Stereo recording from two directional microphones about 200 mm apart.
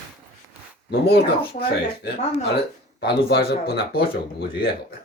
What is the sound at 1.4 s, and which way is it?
Speech, 25° left (ahead or behind).